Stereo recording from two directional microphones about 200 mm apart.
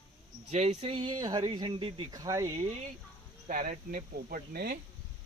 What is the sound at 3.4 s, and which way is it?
Speech, 40° right (ahead or behind).